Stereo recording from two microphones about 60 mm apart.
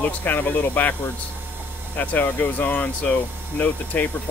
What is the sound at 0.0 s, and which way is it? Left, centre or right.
Speech, left.